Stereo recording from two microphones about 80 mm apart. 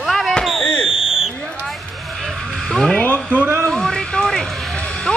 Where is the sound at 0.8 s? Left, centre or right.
Centre.